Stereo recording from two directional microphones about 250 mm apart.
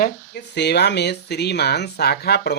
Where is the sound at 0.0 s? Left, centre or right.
Left.